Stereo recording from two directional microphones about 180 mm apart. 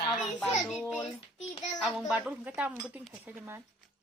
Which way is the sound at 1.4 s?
40° left (ahead or behind).